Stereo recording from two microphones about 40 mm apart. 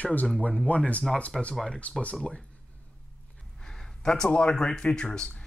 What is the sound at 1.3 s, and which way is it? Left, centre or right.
Speech, centre.